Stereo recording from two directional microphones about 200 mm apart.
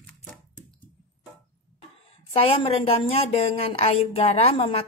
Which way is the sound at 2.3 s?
30° left (ahead or behind).